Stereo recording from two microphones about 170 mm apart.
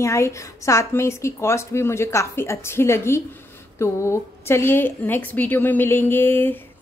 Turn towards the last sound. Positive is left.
turn(degrees=10)  # may be behind; listen again after turning